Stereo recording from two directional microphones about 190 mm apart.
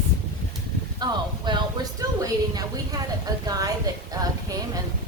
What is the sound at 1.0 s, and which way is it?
Speech, 25° right (ahead or behind).